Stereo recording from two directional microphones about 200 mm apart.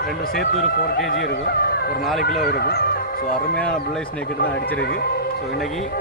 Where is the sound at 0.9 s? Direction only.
50° left (ahead or behind).